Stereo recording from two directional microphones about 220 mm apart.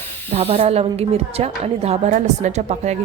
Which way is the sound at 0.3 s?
25° right (ahead or behind).